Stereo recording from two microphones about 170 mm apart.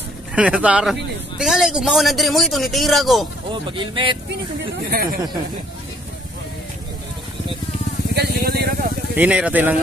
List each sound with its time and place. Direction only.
0.3 s a man's voice: 5° right (ahead or behind)
3.7 s speech: 30° right (ahead or behind)
4.9 s speech: 60° right (ahead or behind)
8.1 s speech: 70° right (ahead or behind)
9.1 s speech: 10° right (ahead or behind)